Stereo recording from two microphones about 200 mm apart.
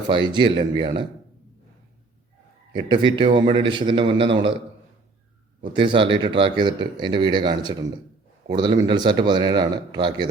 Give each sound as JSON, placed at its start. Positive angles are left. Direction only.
{"t": 0.3, "sound": "speech", "side_deg": -25}
{"t": 2.7, "sound": "speech", "side_deg": -20}
{"t": 5.7, "sound": "speech", "side_deg": -25}